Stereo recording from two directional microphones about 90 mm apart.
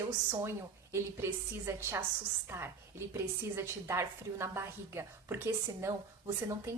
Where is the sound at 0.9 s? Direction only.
30° right (ahead or behind).